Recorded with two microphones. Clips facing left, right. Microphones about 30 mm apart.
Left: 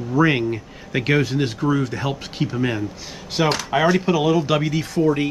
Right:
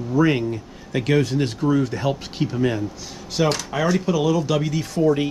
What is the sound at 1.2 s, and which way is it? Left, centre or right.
Speech, centre.